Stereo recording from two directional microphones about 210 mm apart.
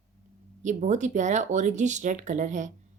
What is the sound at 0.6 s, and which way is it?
Speech, 35° right (ahead or behind).